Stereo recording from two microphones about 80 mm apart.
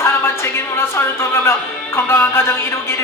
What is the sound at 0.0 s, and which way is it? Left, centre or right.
Music, left.